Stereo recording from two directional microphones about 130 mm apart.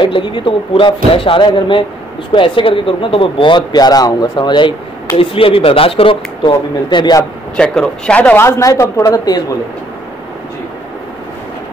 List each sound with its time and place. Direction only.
0.0 s speech: 40° left (ahead or behind)
7.5 s speech: 5° left (ahead or behind); by 9.4 s 30° left (ahead or behind)